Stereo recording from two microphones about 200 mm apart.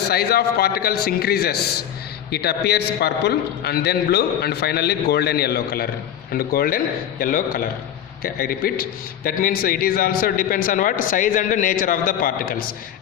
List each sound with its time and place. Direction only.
0.1 s a man's voice: 50° left (ahead or behind)